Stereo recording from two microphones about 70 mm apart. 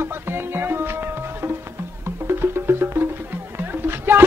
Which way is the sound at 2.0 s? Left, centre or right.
Right.